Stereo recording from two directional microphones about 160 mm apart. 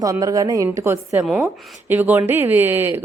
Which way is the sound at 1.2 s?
5° right (ahead or behind).